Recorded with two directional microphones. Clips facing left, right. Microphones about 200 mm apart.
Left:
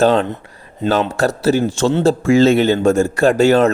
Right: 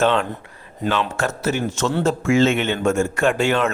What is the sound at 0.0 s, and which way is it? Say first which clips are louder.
A man's voice: left 5 dB; 35° left (ahead or behind).